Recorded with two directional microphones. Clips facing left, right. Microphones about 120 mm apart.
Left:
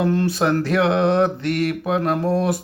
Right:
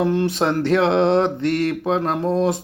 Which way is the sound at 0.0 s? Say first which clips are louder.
Even; 20° right (ahead or behind).